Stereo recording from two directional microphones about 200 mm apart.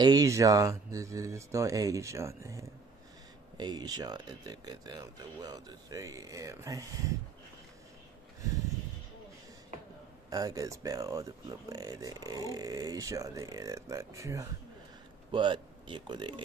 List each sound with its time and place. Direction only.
0.0 s speech: 20° right (ahead or behind)
10.3 s speech: 15° right (ahead or behind)